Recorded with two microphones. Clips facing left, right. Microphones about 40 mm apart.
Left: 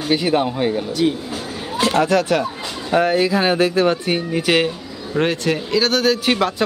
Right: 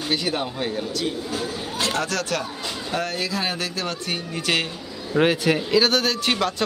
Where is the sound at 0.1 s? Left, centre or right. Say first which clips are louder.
Left 8 dB; centre.